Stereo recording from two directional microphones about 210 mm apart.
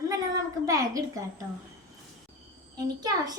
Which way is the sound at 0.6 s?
15° right (ahead or behind).